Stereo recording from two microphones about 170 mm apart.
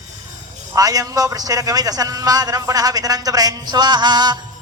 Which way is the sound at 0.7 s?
20° right (ahead or behind).